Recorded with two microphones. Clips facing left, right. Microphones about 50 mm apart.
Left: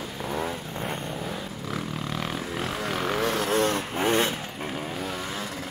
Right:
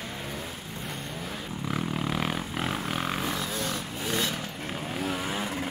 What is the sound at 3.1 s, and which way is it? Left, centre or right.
Vehicle, left.